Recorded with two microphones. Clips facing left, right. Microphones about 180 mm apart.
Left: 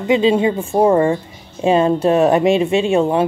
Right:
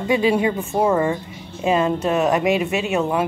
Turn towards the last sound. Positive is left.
turn(degrees=30)  # may be behind; listen again after turning